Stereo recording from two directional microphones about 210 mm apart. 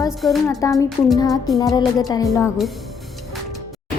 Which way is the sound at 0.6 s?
15° left (ahead or behind).